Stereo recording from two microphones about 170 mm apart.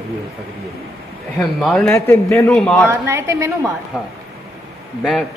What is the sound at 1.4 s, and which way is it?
A man's voice, centre (ahead or behind).